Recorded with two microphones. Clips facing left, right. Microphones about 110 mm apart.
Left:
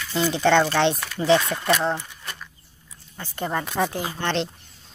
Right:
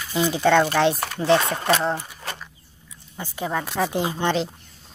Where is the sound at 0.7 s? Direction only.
5° right (ahead or behind).